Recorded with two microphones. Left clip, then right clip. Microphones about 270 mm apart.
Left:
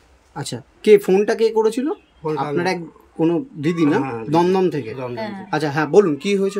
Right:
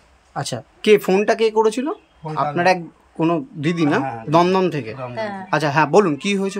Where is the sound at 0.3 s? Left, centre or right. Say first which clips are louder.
Right 4 dB; centre.